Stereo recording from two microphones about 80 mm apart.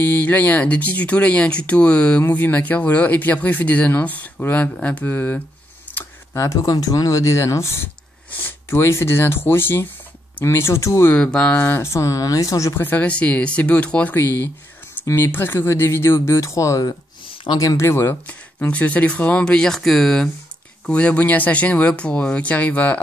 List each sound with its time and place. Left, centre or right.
0.0 s speech: centre
5.9 s computer keyboard: left
6.3 s speech: left
11.1 s speech: centre; by 12.7 s left
12.7 s speech: left
17.8 s speech: left
18.2 s speech: centre